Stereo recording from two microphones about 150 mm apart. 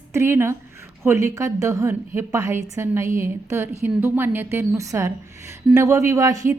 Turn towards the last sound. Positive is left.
turn(degrees=-20)  # may be behind; listen again after turning